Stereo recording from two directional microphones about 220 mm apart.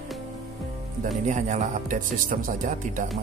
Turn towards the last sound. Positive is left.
turn(degrees=-35)  # may be behind; listen again after turning